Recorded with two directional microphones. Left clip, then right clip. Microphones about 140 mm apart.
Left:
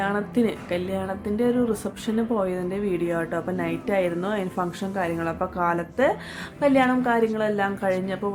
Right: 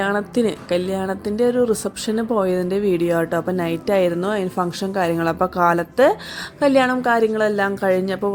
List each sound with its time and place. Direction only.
0.0 s a woman's voice: 55° right (ahead or behind)